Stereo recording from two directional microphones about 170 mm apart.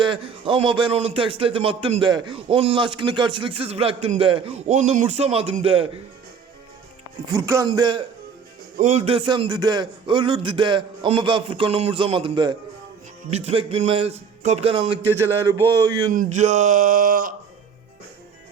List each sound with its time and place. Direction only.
0.0 s a man's voice: 30° right (ahead or behind)
7.3 s a man's voice: 20° right (ahead or behind)
8.8 s a man's voice: 40° right (ahead or behind)
15.0 s a man's voice: 15° right (ahead or behind)
16.1 s a sound: 45° right (ahead or behind)